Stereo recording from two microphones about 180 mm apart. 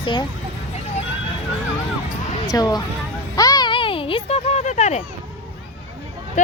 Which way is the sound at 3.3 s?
20° left (ahead or behind).